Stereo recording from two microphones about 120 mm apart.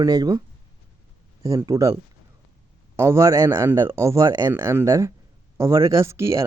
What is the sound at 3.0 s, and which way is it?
A man's voice, 25° right (ahead or behind).